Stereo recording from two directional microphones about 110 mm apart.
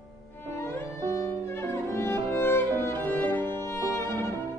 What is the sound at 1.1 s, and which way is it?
Violin, 25° left (ahead or behind).